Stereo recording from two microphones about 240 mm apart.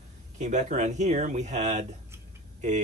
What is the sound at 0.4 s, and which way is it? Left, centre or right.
A man's voice, right.